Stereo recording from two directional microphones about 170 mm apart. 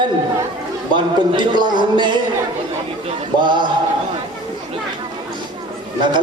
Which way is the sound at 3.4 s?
25° right (ahead or behind).